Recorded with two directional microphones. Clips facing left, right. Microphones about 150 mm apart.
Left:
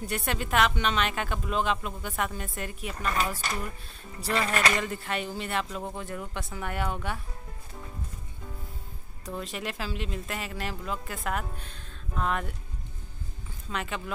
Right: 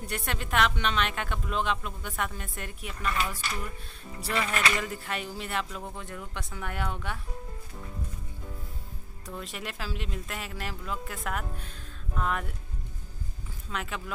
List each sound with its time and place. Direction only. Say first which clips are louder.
0.1 s speech: left 2 dB; 5° left (ahead or behind)
3.1 s speech: left 2 dB; 40° left (ahead or behind)
4.8 s speech: left 3 dB; centre (ahead or behind)
9.4 s speech: left 3 dB; centre (ahead or behind)
13.7 s speech: left 2 dB; centre (ahead or behind)